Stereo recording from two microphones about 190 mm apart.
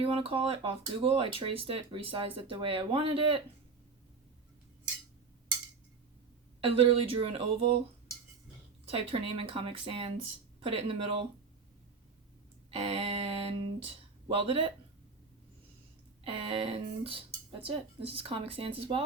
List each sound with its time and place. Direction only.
0.0 s speech: 30° right (ahead or behind)
6.6 s speech: 30° right (ahead or behind)
8.9 s speech: 30° right (ahead or behind)
12.7 s speech: 30° right (ahead or behind)
16.2 s speech: 30° right (ahead or behind)